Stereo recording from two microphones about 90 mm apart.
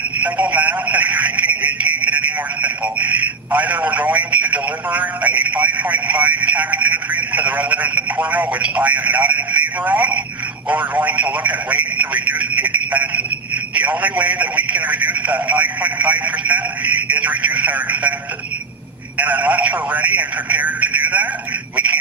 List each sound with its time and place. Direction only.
0.2 s a man's voice: 15° right (ahead or behind)
19.1 s a man's voice: 15° right (ahead or behind)